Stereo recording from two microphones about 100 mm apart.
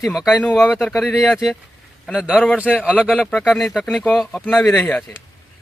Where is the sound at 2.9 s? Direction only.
15° left (ahead or behind).